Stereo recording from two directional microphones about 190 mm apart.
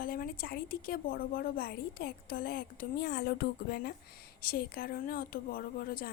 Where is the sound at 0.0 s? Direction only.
50° left (ahead or behind).